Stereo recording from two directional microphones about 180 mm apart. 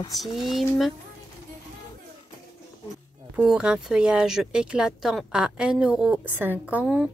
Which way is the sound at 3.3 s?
5° right (ahead or behind).